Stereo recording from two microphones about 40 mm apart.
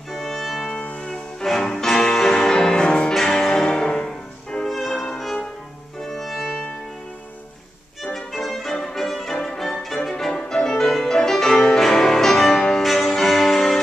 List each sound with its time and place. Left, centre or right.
0.1 s music: centre
0.7 s music: left
1.4 s music: centre
3.2 s music: centre
3.5 s music: centre
4.6 s music: centre
8.0 s music: centre